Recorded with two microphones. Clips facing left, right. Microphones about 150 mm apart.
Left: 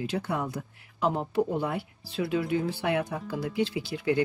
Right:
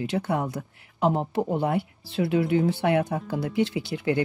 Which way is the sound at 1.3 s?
65° right (ahead or behind).